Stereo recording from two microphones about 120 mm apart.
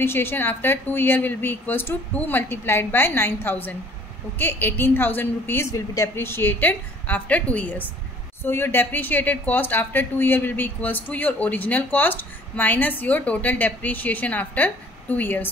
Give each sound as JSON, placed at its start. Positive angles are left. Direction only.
{"t": 0.0, "sound": "a woman's voice", "side_deg": 20}